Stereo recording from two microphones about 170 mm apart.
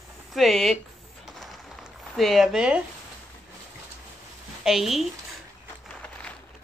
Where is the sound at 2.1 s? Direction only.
Centre (ahead or behind).